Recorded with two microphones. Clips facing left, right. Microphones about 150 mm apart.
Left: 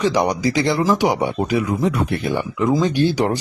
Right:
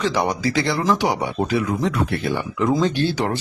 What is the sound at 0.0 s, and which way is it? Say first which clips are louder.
Speech: left 3 dB; 15° left (ahead or behind).